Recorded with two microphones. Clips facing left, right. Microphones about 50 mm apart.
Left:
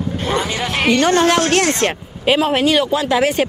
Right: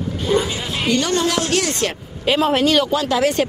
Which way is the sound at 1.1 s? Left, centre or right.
Left.